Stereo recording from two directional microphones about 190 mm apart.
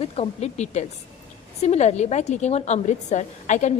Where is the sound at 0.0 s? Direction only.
35° left (ahead or behind).